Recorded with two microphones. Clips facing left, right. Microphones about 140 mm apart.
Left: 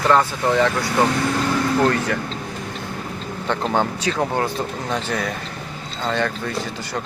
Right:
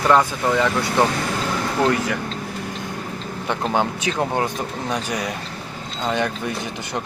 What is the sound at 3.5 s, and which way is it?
Speech, 15° right (ahead or behind).